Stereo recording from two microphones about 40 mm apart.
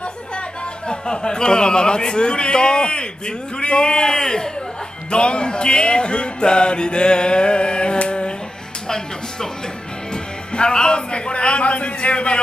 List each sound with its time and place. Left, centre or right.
0.8 s a man's voice: left
8.8 s music: centre
10.1 s speech: left